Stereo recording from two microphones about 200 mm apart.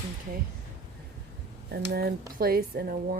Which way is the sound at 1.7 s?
50° right (ahead or behind).